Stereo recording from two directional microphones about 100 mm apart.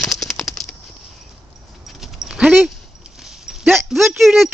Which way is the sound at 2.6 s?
5° right (ahead or behind).